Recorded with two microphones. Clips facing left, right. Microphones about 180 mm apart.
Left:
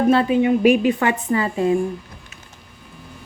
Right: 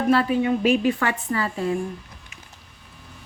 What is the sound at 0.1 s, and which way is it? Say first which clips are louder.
A woman's voice: left 1 dB; 20° left (ahead or behind).